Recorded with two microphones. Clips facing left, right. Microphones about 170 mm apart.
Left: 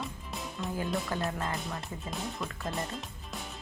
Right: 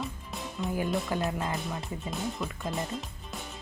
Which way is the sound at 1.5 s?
Centre (ahead or behind).